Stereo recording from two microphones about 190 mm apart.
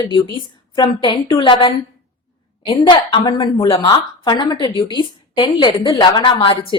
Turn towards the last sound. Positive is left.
turn(degrees=30)  # may be behind; listen again after turning